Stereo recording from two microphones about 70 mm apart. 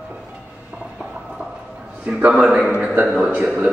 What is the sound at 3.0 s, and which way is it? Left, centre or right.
Speech, centre.